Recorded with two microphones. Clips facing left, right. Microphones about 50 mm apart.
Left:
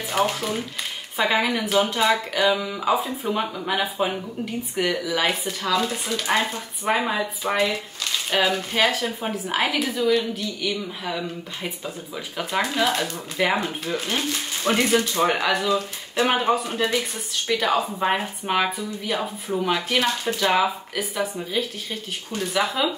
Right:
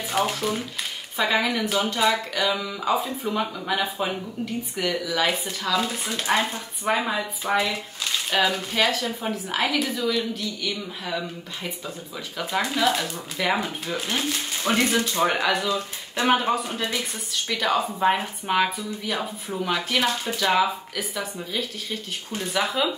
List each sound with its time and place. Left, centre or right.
0.1 s speech: centre
5.3 s speech: centre
6.9 s speech: centre
12.4 s speech: centre
13.4 s speech: centre
13.8 s speech: centre
15.7 s speech: left
16.3 s speech: centre
20.0 s speech: centre